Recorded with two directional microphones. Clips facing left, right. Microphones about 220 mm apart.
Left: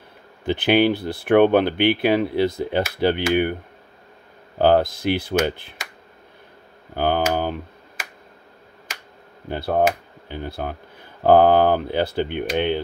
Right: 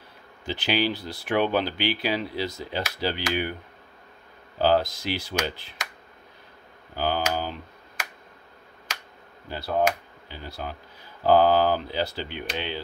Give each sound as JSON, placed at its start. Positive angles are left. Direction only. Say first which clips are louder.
{"t": 0.5, "sound": "speech", "louder": "left 8 dB", "side_deg": 55}
{"t": 4.6, "sound": "speech", "louder": "left 5 dB", "side_deg": 55}
{"t": 7.0, "sound": "speech", "louder": "left 6 dB", "side_deg": 55}
{"t": 9.5, "sound": "speech", "louder": "left 5 dB", "side_deg": 55}